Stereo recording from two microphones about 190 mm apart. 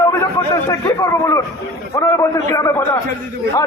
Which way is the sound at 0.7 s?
15° left (ahead or behind).